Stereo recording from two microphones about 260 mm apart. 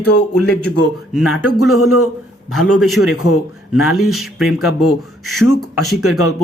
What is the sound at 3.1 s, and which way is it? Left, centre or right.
Speech, left.